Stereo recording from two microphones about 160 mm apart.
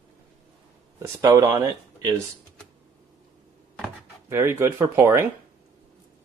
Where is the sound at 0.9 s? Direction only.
20° right (ahead or behind).